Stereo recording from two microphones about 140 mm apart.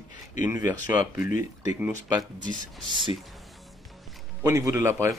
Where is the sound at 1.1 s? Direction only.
70° left (ahead or behind).